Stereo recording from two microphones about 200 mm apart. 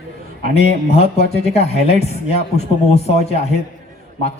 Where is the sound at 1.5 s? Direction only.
30° left (ahead or behind).